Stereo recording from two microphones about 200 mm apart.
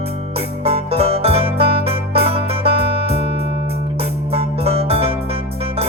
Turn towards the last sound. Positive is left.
turn(degrees=-30)  # may be behind; listen again after turning